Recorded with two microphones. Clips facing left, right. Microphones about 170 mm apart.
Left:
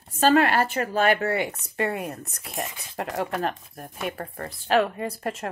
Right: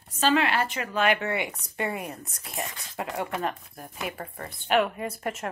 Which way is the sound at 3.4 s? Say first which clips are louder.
Left 2 dB; 70° left (ahead or behind).